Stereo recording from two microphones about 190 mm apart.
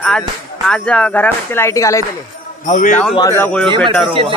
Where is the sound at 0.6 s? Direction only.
5° left (ahead or behind).